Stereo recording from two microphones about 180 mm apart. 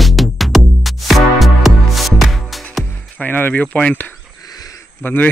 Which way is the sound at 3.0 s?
10° left (ahead or behind).